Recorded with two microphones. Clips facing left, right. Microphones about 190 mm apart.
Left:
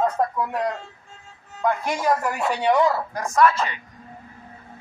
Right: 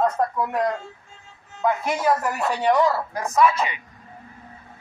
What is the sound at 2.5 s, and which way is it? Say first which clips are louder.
Speech: even; 15° left (ahead or behind).